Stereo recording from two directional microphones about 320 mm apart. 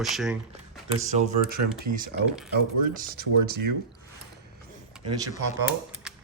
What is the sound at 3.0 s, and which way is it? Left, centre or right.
Speech, right.